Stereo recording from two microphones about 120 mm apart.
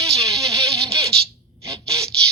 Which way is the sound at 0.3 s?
25° right (ahead or behind).